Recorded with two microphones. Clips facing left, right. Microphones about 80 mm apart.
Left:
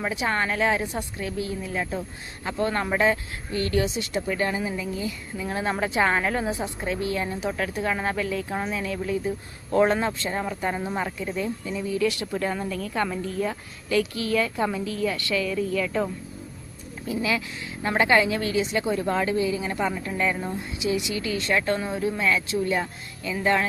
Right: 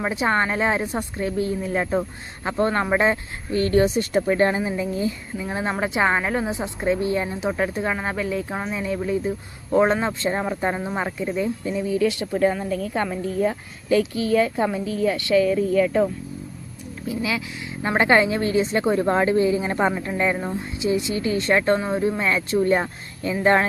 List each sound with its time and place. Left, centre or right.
0.0 s speech: right
5.4 s a woman's voice: centre
11.2 s speech: centre
11.6 s a woman's voice: right
17.1 s speech: centre
17.8 s speech: right